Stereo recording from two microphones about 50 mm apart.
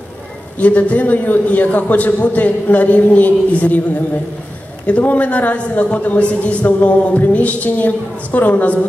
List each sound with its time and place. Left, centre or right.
0.6 s a man's voice: left
4.8 s a man's voice: left